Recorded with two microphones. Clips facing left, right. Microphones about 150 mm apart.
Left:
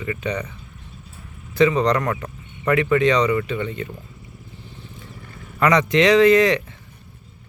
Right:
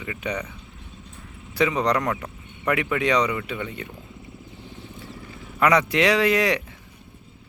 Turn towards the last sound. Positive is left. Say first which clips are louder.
# left 6 dB
turn(degrees=-10)  # may be behind; listen again after turning